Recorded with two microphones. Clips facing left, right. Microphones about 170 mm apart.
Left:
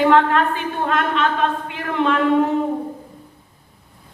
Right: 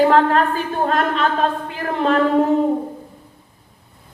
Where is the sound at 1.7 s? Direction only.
35° right (ahead or behind).